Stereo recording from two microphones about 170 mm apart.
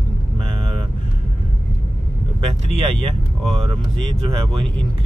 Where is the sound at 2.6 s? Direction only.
35° right (ahead or behind).